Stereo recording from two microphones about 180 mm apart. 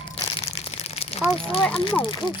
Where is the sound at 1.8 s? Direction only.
30° left (ahead or behind).